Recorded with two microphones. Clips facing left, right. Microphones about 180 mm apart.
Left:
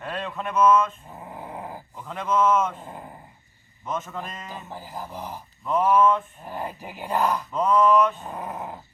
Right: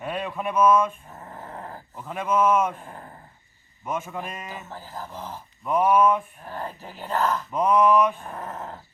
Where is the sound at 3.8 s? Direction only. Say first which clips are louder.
Right 1 dB; 10° right (ahead or behind).